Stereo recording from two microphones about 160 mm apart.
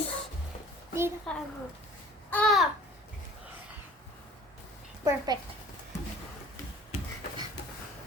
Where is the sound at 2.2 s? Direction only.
10° left (ahead or behind).